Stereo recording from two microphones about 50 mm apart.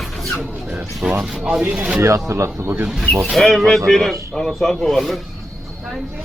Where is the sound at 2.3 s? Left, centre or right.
Right.